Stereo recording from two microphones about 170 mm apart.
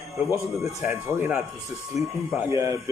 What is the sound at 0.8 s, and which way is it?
Speech, 15° right (ahead or behind).